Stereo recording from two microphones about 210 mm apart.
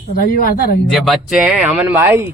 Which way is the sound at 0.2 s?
45° left (ahead or behind).